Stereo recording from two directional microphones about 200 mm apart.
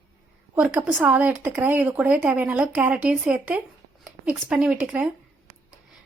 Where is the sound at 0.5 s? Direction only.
5° right (ahead or behind).